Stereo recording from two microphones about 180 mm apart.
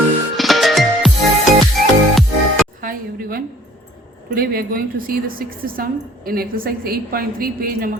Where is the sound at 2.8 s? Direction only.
50° right (ahead or behind).